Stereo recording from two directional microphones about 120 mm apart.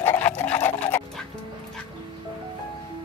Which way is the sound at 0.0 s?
15° left (ahead or behind).